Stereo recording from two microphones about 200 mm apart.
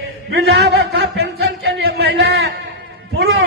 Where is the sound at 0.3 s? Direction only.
60° right (ahead or behind).